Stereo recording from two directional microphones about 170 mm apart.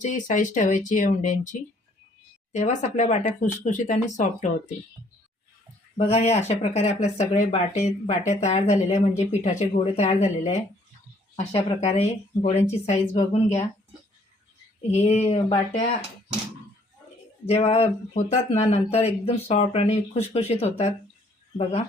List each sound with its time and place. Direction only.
0.0 s speech: 45° left (ahead or behind)
6.0 s speech: 40° left (ahead or behind)
14.8 s speech: 40° left (ahead or behind)
17.4 s speech: 35° left (ahead or behind)